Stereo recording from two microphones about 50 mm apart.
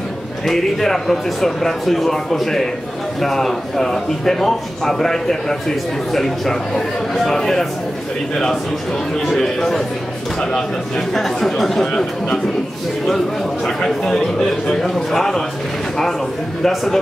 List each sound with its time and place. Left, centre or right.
0.5 s a man's voice: centre
9.3 s a man's voice: centre
11.1 s a man's voice: centre
13.7 s a man's voice: centre
16.6 s speech: centre